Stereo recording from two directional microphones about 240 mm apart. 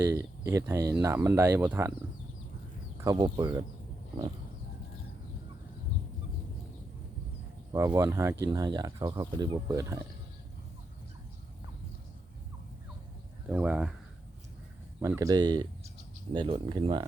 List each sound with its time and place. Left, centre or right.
0.0 s speech: centre
3.0 s speech: centre
7.7 s speech: centre
13.5 s speech: centre
15.0 s speech: centre